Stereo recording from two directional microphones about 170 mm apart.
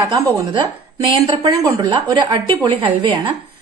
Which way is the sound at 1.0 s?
25° right (ahead or behind).